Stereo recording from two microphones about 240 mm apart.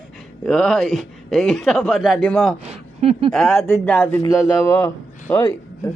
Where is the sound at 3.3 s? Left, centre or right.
Centre.